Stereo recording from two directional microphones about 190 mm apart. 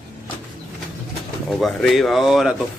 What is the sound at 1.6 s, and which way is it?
Speech, centre (ahead or behind).